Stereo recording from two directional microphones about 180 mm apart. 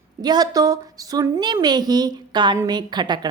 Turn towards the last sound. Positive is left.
turn(degrees=-25)  # may be behind; listen again after turning